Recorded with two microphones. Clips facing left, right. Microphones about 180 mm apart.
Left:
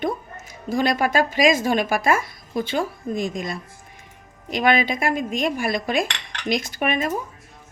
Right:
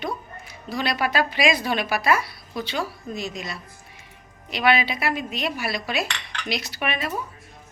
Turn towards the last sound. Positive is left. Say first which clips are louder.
# left 5 dB
turn(degrees=45)  # may be behind; listen again after turning